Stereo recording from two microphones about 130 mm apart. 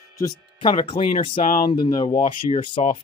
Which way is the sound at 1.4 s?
90° left.